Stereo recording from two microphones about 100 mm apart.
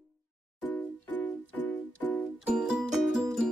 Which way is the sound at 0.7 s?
20° left (ahead or behind).